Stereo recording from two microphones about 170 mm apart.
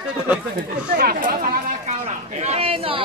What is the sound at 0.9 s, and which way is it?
Speech, 60° right (ahead or behind).